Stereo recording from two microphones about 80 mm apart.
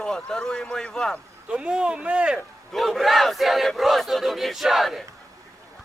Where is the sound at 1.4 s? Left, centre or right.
Centre.